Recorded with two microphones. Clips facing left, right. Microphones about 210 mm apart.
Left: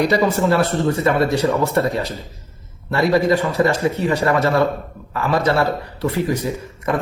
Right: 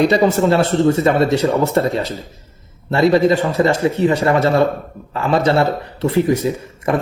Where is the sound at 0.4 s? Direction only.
25° right (ahead or behind).